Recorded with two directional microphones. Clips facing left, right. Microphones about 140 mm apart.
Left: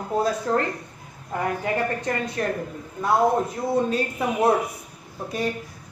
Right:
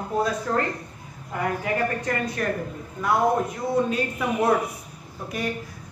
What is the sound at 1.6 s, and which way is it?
Speech, 30° left (ahead or behind).